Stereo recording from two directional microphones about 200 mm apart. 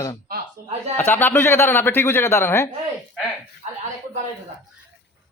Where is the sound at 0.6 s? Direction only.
50° right (ahead or behind).